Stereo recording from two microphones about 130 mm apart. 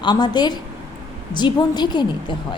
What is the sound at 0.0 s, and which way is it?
A woman's voice, 35° left (ahead or behind).